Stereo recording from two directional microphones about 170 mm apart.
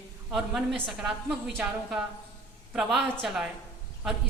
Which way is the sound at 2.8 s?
Centre (ahead or behind).